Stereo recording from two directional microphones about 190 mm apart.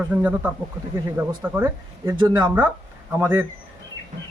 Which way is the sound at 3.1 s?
10° right (ahead or behind).